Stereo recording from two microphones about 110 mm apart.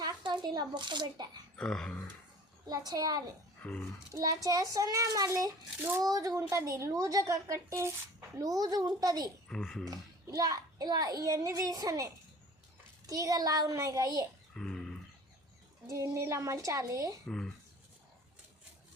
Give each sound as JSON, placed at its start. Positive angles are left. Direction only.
{"t": 0.0, "sound": "speech", "side_deg": -40}
{"t": 1.5, "sound": "speech", "side_deg": 5}
{"t": 2.6, "sound": "a child's voice", "side_deg": -35}
{"t": 3.6, "sound": "speech", "side_deg": 15}
{"t": 4.1, "sound": "a child's voice", "side_deg": -30}
{"t": 9.5, "sound": "speech", "side_deg": 5}
{"t": 9.8, "sound": "a child's voice", "side_deg": -35}
{"t": 14.5, "sound": "dog", "side_deg": 5}
{"t": 15.9, "sound": "a woman's voice", "side_deg": -25}
{"t": 17.2, "sound": "speech", "side_deg": 5}